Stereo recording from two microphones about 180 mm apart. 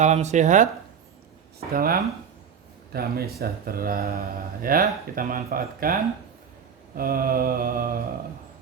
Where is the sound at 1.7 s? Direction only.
55° right (ahead or behind).